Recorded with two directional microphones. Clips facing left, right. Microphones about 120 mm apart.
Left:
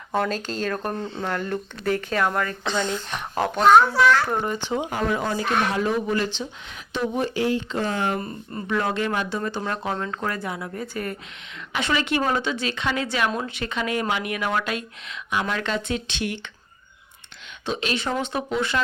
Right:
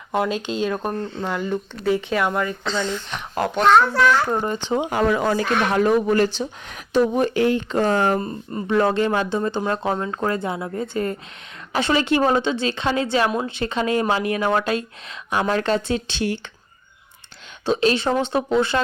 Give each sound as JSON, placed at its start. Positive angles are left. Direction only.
{"t": 0.3, "sound": "speech", "side_deg": 40}
{"t": 0.6, "sound": "speech", "side_deg": -10}
{"t": 2.6, "sound": "speech", "side_deg": 15}
{"t": 3.1, "sound": "a child's voice", "side_deg": 0}
{"t": 4.8, "sound": "speech", "side_deg": -90}
{"t": 5.7, "sound": "speech", "side_deg": -50}
{"t": 7.2, "sound": "speech", "side_deg": -55}
{"t": 8.2, "sound": "speech", "side_deg": -25}
{"t": 17.7, "sound": "speech", "side_deg": -35}